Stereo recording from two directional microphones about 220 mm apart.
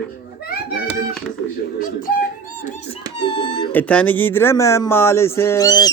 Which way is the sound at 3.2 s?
20° left (ahead or behind).